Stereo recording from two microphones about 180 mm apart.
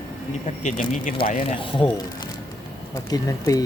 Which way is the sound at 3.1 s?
20° left (ahead or behind).